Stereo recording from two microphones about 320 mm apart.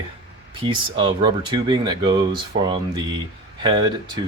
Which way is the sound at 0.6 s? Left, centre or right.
Centre.